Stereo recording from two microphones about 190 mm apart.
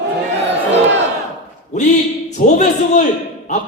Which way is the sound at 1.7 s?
40° left (ahead or behind).